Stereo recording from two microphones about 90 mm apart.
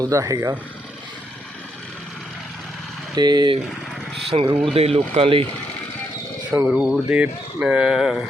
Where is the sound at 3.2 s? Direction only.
50° right (ahead or behind).